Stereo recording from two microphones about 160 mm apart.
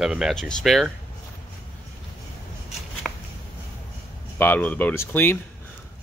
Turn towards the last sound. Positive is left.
turn(degrees=15)  # may be behind; listen again after turning